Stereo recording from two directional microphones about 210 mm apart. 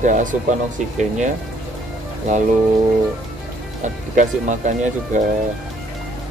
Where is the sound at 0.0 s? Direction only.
35° right (ahead or behind).